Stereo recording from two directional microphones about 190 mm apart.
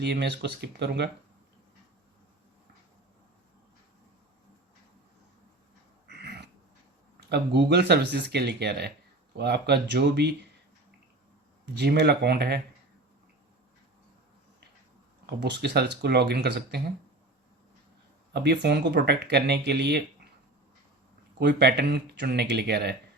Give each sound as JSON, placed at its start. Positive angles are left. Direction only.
{"t": 0.0, "sound": "speech", "side_deg": -60}
{"t": 6.1, "sound": "a sound", "side_deg": -60}
{"t": 7.2, "sound": "speech", "side_deg": -60}
{"t": 11.6, "sound": "speech", "side_deg": -60}
{"t": 15.4, "sound": "speech", "side_deg": -60}
{"t": 18.3, "sound": "speech", "side_deg": -60}
{"t": 21.3, "sound": "speech", "side_deg": -60}